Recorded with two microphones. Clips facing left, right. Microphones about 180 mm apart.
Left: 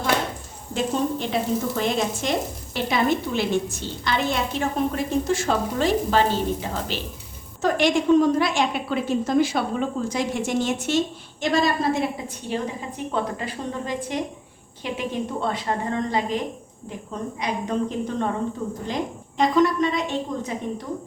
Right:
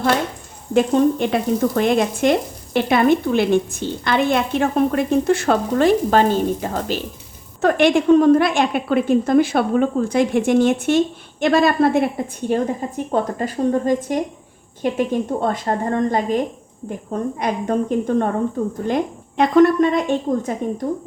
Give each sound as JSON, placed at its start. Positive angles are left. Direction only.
{"t": 0.7, "sound": "a woman's voice", "side_deg": -60}
{"t": 7.6, "sound": "a woman's voice", "side_deg": -60}
{"t": 19.4, "sound": "a woman's voice", "side_deg": -55}